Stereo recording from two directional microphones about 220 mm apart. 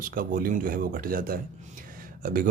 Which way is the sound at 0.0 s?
40° right (ahead or behind).